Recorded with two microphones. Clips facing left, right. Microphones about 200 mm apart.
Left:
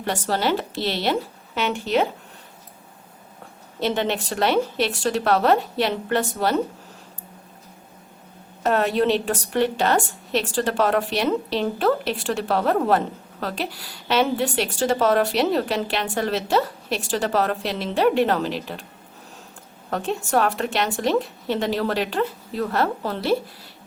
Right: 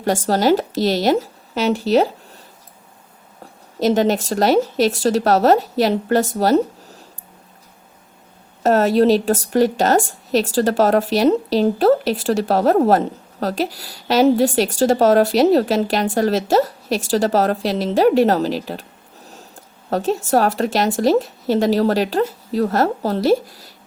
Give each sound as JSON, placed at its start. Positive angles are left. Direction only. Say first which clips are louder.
{"t": 0.3, "sound": "speech", "louder": "right 7 dB", "side_deg": -40}
{"t": 3.8, "sound": "speech", "louder": "right 7 dB", "side_deg": -40}
{"t": 8.6, "sound": "speech", "louder": "right 6 dB", "side_deg": -40}
{"t": 19.9, "sound": "speech", "louder": "right 5 dB", "side_deg": -40}